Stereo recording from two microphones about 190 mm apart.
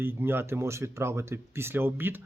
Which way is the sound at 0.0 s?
10° right (ahead or behind).